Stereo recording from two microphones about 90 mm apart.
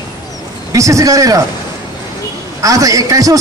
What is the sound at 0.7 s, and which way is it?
Speech, 35° right (ahead or behind).